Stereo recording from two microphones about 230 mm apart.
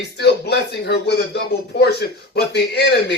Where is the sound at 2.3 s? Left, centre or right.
Left.